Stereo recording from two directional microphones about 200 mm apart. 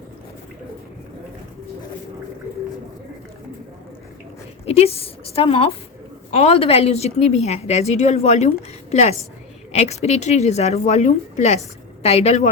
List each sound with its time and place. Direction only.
4.6 s a woman's voice: 30° left (ahead or behind)